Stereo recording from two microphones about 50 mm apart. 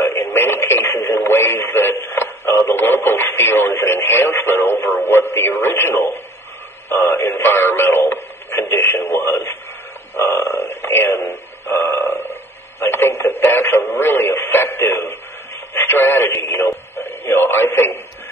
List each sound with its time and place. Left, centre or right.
0.2 s radio: left
7.0 s speech: left
12.1 s a sound: left
12.8 s speech: left